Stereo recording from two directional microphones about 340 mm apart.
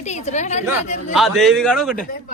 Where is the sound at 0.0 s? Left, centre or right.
Centre.